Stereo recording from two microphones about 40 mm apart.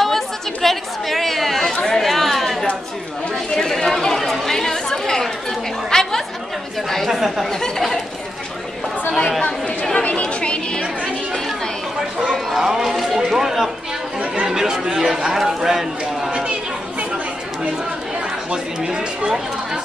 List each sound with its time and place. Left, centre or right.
0.0 s chatter: centre
7.1 s a man's voice: centre
7.6 s speech: centre
9.9 s chatter: left
12.5 s a sound: centre
14.4 s chatter: centre
15.0 s a man's voice: centre
16.3 s chatter: right
18.8 s a man's voice: centre